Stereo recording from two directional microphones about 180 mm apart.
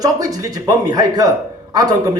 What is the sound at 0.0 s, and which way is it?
A man's voice, 20° right (ahead or behind).